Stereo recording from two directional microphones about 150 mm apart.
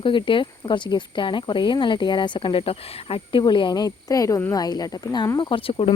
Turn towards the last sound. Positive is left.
turn(degrees=35)  # may be behind; listen again after turning